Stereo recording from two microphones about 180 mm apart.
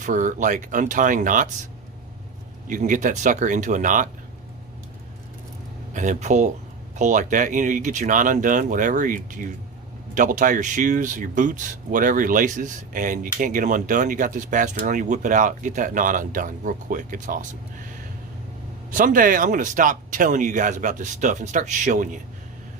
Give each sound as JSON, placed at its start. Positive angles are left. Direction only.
{"t": 0.0, "sound": "speech", "side_deg": -45}
{"t": 2.6, "sound": "speech", "side_deg": -45}
{"t": 5.9, "sound": "speech", "side_deg": -45}
{"t": 18.9, "sound": "speech", "side_deg": -50}